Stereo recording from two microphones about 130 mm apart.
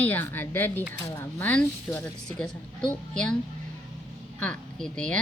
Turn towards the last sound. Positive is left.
turn(degrees=5)  # may be behind; listen again after turning